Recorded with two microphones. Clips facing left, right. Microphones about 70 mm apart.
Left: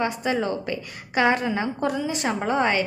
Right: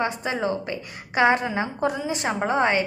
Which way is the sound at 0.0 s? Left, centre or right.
Right.